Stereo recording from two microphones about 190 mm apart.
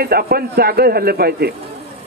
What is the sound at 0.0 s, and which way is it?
A woman's voice, 55° right (ahead or behind).